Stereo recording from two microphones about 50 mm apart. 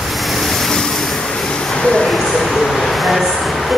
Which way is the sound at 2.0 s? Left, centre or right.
Centre.